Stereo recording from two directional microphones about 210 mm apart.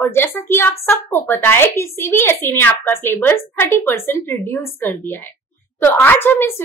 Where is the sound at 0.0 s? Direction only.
10° left (ahead or behind).